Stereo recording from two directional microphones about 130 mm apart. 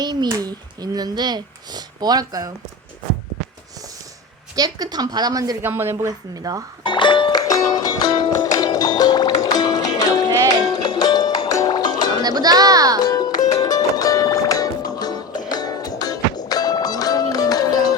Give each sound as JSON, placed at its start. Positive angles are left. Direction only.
{"t": 0.0, "sound": "speech", "side_deg": -30}
{"t": 4.5, "sound": "a woman's voice", "side_deg": -30}
{"t": 5.6, "sound": "speech", "side_deg": -20}
{"t": 6.8, "sound": "music", "side_deg": 40}
{"t": 12.2, "sound": "a child's voice", "side_deg": -30}
{"t": 13.1, "sound": "music", "side_deg": 30}